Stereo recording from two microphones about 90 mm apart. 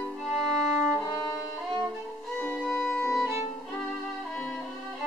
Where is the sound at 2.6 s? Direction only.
5° right (ahead or behind).